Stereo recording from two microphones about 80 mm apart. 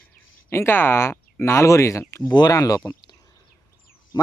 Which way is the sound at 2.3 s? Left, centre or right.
Left.